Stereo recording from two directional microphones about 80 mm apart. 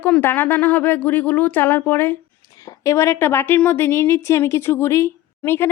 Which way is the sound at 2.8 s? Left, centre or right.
Left.